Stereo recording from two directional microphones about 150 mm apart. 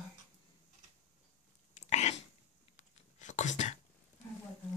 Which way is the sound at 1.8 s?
50° left (ahead or behind).